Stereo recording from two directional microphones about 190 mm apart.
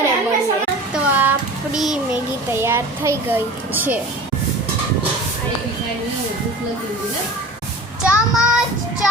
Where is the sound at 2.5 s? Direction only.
15° right (ahead or behind).